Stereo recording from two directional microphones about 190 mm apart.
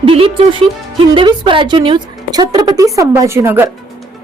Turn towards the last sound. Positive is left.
turn(degrees=-10)  # may be behind; listen again after turning